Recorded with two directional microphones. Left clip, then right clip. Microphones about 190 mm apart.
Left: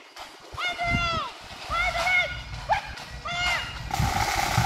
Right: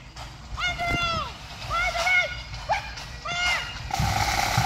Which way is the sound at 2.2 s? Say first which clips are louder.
Right 1 dB; 40° right (ahead or behind).